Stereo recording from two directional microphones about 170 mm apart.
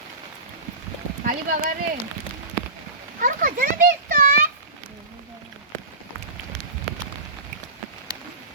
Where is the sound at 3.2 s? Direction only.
55° right (ahead or behind).